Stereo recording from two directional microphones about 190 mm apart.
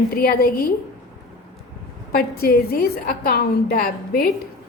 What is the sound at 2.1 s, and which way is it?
A woman's voice, 50° left (ahead or behind).